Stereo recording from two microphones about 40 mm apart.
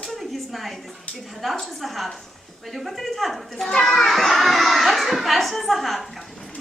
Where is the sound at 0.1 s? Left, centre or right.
Centre.